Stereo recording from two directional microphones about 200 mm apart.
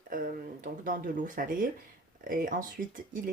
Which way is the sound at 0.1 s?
40° right (ahead or behind).